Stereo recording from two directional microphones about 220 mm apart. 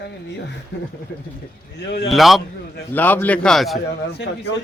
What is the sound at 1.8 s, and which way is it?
Speech, 50° left (ahead or behind).